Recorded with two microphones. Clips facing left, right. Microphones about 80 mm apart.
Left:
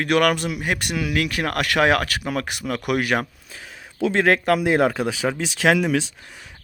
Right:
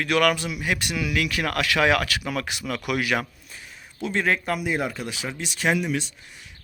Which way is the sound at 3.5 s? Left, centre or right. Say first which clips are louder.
Left 4 dB; left.